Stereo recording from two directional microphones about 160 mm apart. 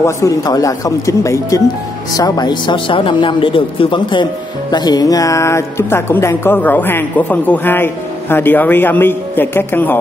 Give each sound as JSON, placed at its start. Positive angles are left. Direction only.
{"t": 0.0, "sound": "speech", "side_deg": 20}